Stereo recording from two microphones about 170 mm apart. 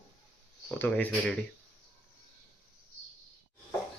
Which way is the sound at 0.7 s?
10° left (ahead or behind).